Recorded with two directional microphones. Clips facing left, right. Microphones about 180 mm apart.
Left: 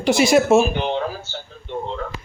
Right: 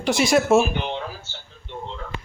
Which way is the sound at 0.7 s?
35° left (ahead or behind).